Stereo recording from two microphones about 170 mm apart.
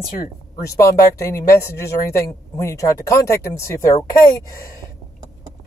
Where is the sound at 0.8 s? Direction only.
15° left (ahead or behind).